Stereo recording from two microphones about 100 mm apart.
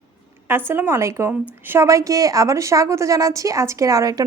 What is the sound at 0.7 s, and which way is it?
A woman's voice, 25° right (ahead or behind).